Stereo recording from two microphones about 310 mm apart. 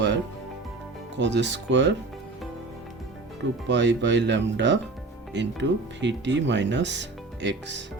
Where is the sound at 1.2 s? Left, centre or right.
Right.